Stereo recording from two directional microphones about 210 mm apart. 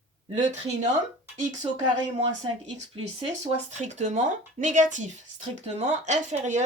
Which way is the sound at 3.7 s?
35° right (ahead or behind).